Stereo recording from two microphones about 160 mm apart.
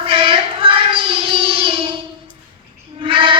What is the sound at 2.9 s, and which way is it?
Fowl, 35° right (ahead or behind).